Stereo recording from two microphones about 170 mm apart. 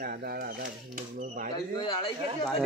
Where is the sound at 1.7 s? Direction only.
25° left (ahead or behind).